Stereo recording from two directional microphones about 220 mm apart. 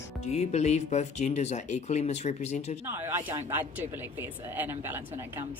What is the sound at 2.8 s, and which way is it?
Speech, 10° right (ahead or behind).